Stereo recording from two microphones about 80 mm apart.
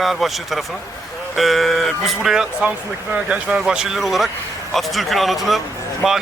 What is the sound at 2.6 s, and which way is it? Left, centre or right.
Speech, centre.